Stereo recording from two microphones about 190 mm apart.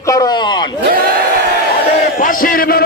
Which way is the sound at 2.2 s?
45° left (ahead or behind).